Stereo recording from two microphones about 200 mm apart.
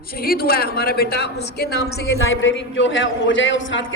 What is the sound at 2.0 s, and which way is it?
A man's voice, 75° left (ahead or behind).